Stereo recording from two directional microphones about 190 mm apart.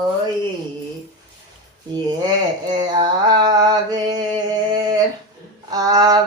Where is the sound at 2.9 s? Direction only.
20° right (ahead or behind).